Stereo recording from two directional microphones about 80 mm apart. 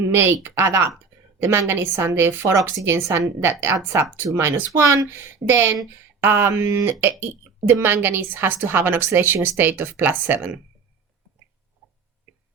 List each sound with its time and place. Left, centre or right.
0.1 s a woman's voice: right